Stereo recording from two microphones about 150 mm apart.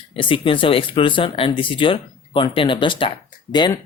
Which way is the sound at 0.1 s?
35° left (ahead or behind).